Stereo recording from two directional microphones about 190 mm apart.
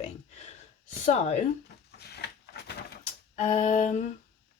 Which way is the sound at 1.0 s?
35° left (ahead or behind).